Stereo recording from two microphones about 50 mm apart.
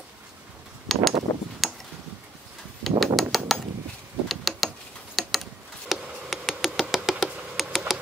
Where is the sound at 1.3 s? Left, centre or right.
Left.